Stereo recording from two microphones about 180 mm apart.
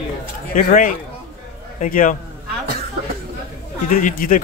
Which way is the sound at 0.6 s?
50° left (ahead or behind).